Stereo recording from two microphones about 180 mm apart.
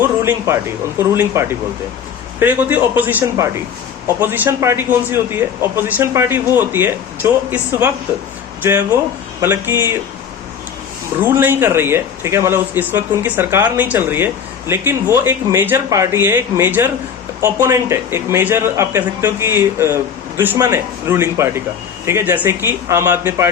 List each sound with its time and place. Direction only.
0.3 s a man's voice: 15° right (ahead or behind)
9.4 s a man's voice: 10° right (ahead or behind)
11.2 s a man's voice: 10° right (ahead or behind)